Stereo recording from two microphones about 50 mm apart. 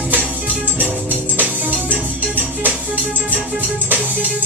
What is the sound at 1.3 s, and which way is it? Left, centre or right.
Music, right.